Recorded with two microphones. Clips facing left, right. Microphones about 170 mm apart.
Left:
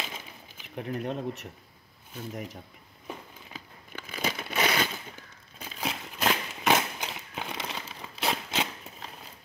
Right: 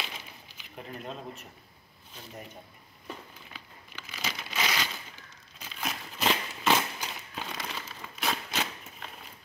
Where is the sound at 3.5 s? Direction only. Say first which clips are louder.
Left 8 dB; 50° left (ahead or behind).